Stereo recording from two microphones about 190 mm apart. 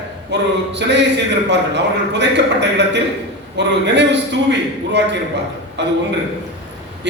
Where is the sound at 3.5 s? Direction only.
65° right (ahead or behind).